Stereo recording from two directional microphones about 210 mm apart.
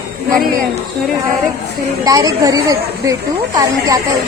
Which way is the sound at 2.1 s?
15° right (ahead or behind).